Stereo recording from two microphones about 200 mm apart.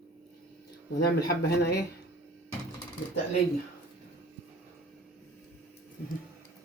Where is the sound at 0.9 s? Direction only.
50° left (ahead or behind).